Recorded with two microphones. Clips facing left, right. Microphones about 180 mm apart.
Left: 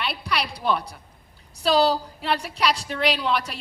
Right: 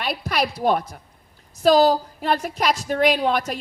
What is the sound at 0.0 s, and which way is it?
A woman's voice, 45° right (ahead or behind).